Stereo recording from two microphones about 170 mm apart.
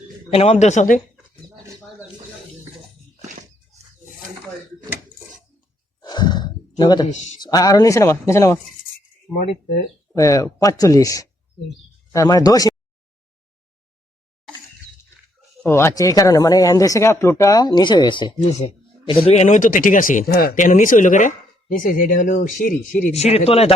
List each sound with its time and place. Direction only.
0.3 s speech: 35° left (ahead or behind)
1.5 s a sound: 20° right (ahead or behind)
6.0 s sigh: 25° left (ahead or behind)
7.1 s speech: 45° left (ahead or behind)
7.3 s speech: 25° left (ahead or behind)
10.1 s speech: 20° left (ahead or behind)
15.6 s speech: 15° left (ahead or behind); by 20.5 s 60° left (ahead or behind)
20.6 s speech: 50° left (ahead or behind)